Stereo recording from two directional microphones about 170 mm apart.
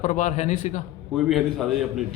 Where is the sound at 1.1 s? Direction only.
Centre (ahead or behind).